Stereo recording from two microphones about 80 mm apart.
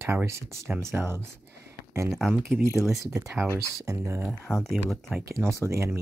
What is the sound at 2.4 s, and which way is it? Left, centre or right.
Speech, centre.